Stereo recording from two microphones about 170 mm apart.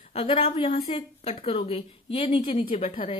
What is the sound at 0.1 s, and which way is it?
A woman's voice, 35° left (ahead or behind).